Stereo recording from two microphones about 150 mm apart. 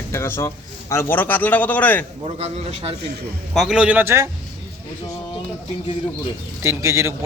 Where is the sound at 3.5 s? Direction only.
Centre (ahead or behind); by 4.3 s 15° right (ahead or behind).